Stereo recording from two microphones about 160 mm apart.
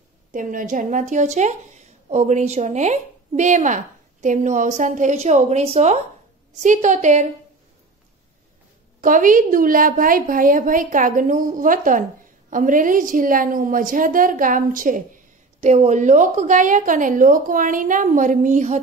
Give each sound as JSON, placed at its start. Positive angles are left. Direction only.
{"t": 0.3, "sound": "a woman's voice", "side_deg": -55}
{"t": 9.0, "sound": "a woman's voice", "side_deg": -55}